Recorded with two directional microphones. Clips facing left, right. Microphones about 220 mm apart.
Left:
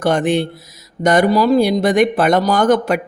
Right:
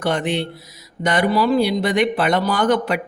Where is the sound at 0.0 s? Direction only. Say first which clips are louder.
Left 5 dB; 45° left (ahead or behind).